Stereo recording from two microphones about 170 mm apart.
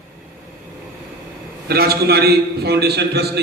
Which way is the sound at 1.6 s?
65° right (ahead or behind).